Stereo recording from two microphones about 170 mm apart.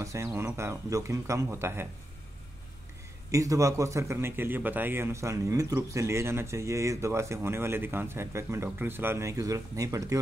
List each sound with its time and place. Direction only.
0.0 s a man's voice: 15° right (ahead or behind)
3.3 s a man's voice: 20° right (ahead or behind)